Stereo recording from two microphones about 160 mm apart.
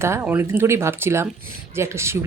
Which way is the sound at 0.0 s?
15° right (ahead or behind).